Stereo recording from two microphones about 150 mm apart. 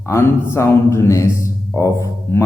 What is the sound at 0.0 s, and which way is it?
Speech, 15° left (ahead or behind).